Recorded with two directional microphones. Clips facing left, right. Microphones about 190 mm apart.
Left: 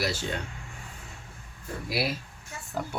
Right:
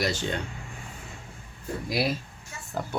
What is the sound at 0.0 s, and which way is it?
Speech, 5° left (ahead or behind).